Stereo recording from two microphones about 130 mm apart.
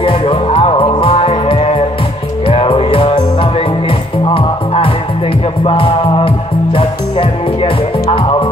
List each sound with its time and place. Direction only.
0.0 s music: 40° left (ahead or behind)